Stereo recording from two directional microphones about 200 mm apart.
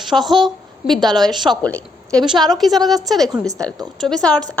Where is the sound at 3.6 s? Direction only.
5° left (ahead or behind).